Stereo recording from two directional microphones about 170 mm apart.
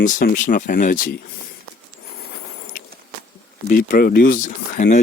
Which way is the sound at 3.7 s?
50° left (ahead or behind).